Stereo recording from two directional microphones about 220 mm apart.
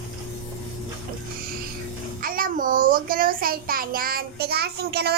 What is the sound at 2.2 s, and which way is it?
A child's voice, 40° right (ahead or behind).